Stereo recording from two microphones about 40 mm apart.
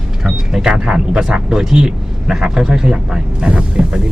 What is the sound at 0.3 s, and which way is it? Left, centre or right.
A man's voice, centre.